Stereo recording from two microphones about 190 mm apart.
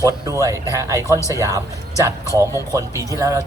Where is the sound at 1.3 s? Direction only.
15° right (ahead or behind).